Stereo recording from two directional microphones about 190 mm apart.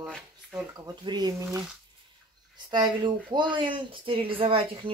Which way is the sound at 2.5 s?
25° right (ahead or behind).